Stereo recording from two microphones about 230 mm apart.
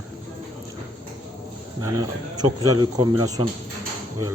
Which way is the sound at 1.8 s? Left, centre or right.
Centre.